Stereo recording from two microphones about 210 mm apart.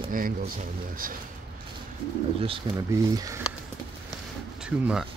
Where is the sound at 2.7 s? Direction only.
20° right (ahead or behind).